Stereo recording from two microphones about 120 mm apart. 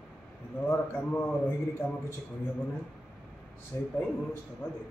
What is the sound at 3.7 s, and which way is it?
Speech, 20° left (ahead or behind).